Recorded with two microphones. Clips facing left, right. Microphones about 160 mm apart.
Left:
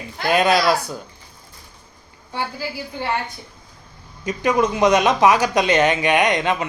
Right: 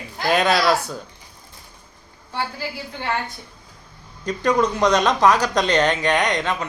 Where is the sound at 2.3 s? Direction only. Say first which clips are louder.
Left 1 dB; 10° left (ahead or behind).